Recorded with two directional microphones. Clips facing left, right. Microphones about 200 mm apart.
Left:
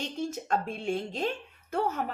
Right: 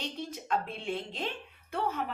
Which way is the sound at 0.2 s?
45° left (ahead or behind).